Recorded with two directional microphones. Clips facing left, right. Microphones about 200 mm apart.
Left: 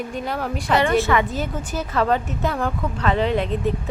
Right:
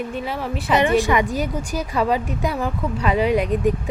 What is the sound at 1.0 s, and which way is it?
Speech, 15° right (ahead or behind).